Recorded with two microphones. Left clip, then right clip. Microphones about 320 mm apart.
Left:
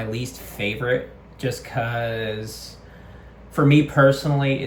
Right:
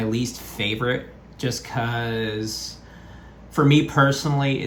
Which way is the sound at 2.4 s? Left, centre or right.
Centre.